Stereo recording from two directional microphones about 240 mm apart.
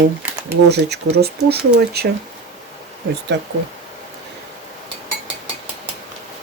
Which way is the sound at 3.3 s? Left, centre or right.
Right.